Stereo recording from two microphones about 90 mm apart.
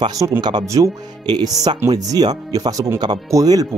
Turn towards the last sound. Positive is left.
turn(degrees=-40)  # may be behind; listen again after turning